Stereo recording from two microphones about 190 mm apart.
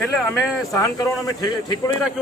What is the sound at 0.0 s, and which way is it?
Speech, 5° left (ahead or behind).